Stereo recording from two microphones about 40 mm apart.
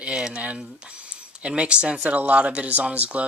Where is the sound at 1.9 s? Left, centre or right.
Right.